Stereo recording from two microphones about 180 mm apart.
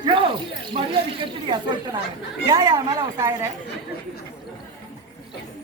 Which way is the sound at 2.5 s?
20° right (ahead or behind).